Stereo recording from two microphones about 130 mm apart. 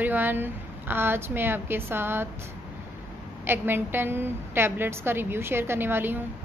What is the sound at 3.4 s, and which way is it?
A woman's voice, 15° right (ahead or behind).